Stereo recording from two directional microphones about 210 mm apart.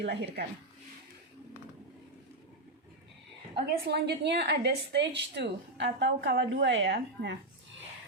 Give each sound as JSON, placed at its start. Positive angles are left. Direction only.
{"t": 0.0, "sound": "a woman's voice", "side_deg": -55}
{"t": 3.5, "sound": "a woman's voice", "side_deg": -50}